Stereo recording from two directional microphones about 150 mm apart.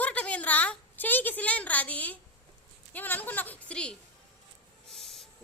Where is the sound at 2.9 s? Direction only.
10° left (ahead or behind).